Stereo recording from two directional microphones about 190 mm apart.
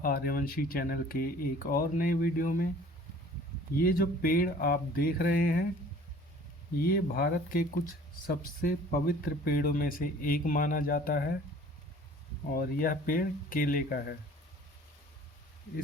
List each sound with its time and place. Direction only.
0.0 s speech: 50° left (ahead or behind)
3.8 s speech: 50° left (ahead or behind)
6.8 s speech: 50° left (ahead or behind)
12.5 s speech: 45° left (ahead or behind)